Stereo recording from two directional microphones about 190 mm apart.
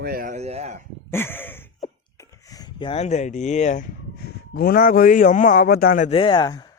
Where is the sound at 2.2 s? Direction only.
15° left (ahead or behind); by 6.1 s 45° left (ahead or behind).